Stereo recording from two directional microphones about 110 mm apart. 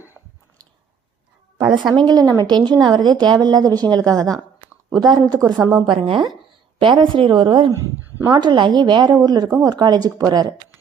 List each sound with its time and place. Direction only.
1.5 s a woman's voice: 45° right (ahead or behind)
6.0 s a woman's voice: 55° right (ahead or behind); by 10.5 s 35° right (ahead or behind)